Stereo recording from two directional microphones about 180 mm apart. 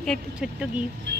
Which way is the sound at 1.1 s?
70° right (ahead or behind).